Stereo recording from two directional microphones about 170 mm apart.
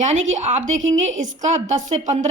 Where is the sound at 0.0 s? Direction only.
45° right (ahead or behind).